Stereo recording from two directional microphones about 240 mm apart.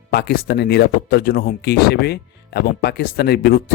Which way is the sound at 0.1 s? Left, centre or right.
Left.